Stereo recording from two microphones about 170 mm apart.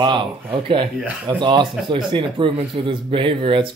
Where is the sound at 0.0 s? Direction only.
25° right (ahead or behind).